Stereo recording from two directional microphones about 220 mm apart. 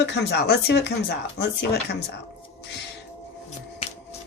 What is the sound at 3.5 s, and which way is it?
Shuffling cards, 30° left (ahead or behind).